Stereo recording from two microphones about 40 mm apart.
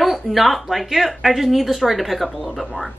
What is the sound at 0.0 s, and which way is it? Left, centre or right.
A woman's voice, centre.